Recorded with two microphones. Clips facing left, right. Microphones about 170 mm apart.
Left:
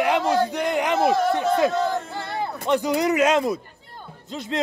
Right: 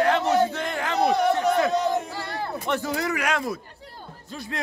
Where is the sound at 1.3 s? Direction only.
20° left (ahead or behind).